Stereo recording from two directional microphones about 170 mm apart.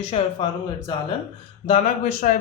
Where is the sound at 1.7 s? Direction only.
45° left (ahead or behind).